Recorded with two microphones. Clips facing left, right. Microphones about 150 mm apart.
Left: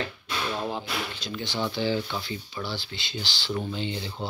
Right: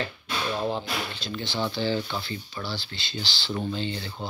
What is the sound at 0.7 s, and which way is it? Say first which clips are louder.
Speech: right 2 dB; 10° left (ahead or behind).